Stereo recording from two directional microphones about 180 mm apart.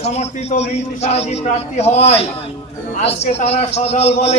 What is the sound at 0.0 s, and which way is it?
A man's voice, 35° left (ahead or behind).